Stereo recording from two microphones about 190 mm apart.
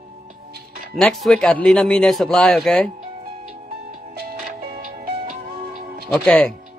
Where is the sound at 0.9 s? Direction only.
Centre (ahead or behind).